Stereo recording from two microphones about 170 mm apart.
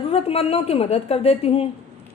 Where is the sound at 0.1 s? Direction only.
35° left (ahead or behind).